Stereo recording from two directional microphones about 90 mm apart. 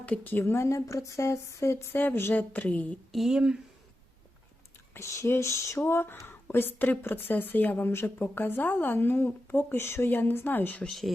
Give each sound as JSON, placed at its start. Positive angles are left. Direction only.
{"t": 0.0, "sound": "speech", "side_deg": 20}
{"t": 3.1, "sound": "speech", "side_deg": -5}
{"t": 4.9, "sound": "speech", "side_deg": 30}
{"t": 10.8, "sound": "speech", "side_deg": 0}